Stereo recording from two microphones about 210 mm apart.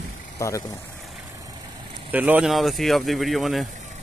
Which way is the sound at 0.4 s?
15° left (ahead or behind).